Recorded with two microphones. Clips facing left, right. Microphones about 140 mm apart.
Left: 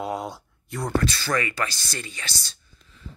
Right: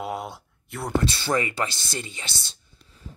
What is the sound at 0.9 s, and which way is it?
Speech, 25° right (ahead or behind).